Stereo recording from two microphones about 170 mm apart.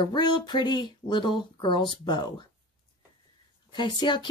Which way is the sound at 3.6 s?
25° left (ahead or behind).